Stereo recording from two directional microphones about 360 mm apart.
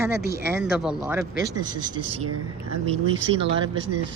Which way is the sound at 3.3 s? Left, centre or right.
Right.